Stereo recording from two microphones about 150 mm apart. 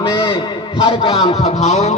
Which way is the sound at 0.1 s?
25° left (ahead or behind).